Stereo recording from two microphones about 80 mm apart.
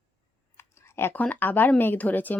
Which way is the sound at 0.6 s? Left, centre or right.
Left.